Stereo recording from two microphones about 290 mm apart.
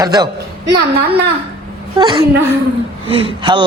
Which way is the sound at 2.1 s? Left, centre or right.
Centre.